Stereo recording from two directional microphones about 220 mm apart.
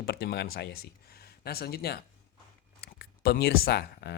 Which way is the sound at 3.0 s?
45° left (ahead or behind).